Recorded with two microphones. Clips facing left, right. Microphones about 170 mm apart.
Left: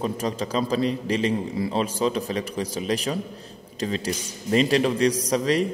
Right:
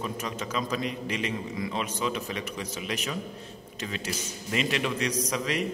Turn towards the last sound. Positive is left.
turn(degrees=35)  # may be behind; listen again after turning